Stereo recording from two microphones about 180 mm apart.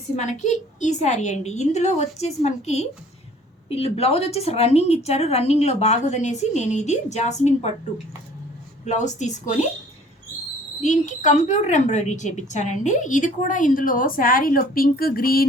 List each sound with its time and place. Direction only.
0.2 s a woman's voice: 40° left (ahead or behind)
8.8 s a woman's voice: 40° left (ahead or behind)
10.8 s a woman's voice: 45° left (ahead or behind)